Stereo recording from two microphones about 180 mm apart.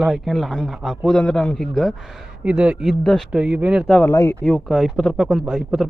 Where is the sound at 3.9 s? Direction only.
15° left (ahead or behind).